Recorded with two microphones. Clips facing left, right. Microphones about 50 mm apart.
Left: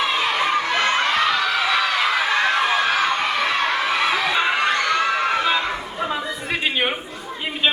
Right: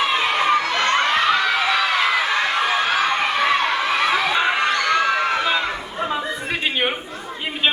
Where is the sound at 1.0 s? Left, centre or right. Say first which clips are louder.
Right 1 dB; centre.